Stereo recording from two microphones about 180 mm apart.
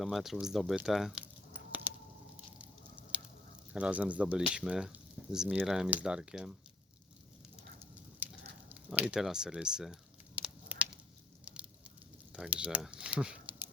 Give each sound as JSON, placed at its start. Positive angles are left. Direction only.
{"t": 0.0, "sound": "speech", "side_deg": 0}
{"t": 3.7, "sound": "speech", "side_deg": -5}
{"t": 8.2, "sound": "a sound", "side_deg": -10}
{"t": 11.4, "sound": "fire", "side_deg": -5}
{"t": 12.3, "sound": "speech", "side_deg": -5}